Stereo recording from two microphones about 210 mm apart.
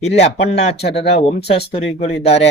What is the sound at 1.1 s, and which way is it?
Speech, 30° left (ahead or behind).